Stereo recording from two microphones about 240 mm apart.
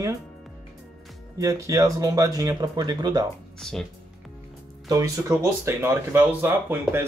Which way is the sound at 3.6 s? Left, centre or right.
Centre.